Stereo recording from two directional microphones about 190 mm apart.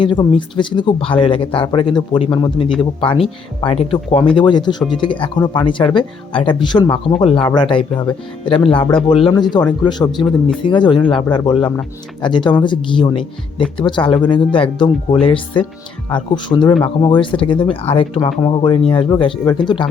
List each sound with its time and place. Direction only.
0.0 s speech: 25° left (ahead or behind)